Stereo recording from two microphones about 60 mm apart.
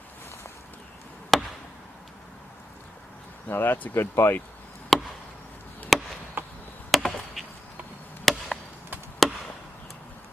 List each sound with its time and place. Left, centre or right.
1.3 s chop: centre
3.4 s speech: left
4.9 s chop: centre
6.4 s chop: right
6.9 s chop: centre